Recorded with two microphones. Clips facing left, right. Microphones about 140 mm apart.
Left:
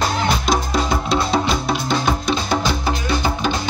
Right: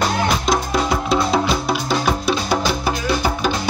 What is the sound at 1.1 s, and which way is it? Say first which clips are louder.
Music: right 1 dB; 5° right (ahead or behind).